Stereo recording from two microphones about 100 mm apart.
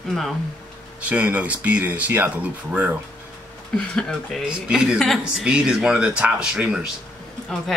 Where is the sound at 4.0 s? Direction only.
5° left (ahead or behind).